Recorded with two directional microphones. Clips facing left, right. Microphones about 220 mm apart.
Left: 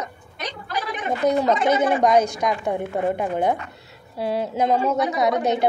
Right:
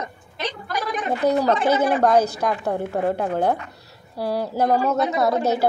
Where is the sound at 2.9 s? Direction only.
5° left (ahead or behind).